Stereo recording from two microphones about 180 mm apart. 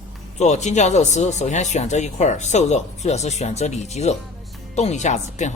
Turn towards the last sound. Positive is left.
turn(degrees=40)  # may be behind; listen again after turning